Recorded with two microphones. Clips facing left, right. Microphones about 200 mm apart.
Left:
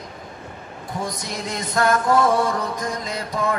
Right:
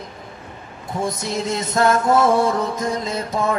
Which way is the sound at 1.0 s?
25° right (ahead or behind).